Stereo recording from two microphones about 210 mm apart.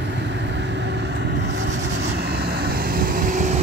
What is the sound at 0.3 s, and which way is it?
Vehicle, 55° right (ahead or behind).